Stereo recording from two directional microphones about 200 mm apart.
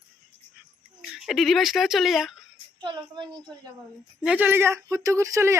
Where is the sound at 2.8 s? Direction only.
20° right (ahead or behind).